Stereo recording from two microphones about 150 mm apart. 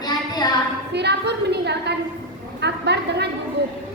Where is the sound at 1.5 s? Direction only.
90° right.